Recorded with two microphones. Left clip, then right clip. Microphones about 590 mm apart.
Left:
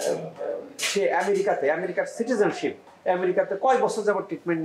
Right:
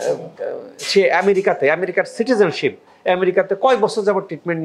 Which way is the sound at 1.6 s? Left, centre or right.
Right.